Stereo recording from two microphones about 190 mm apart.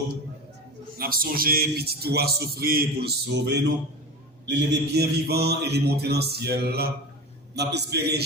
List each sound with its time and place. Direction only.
0.9 s speech: 50° right (ahead or behind)